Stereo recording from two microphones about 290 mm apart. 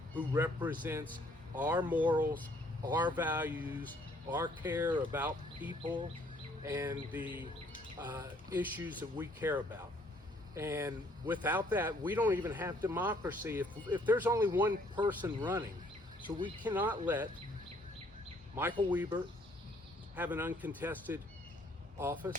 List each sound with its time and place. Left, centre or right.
0.2 s speech: centre
18.5 s speech: centre
20.1 s speech: centre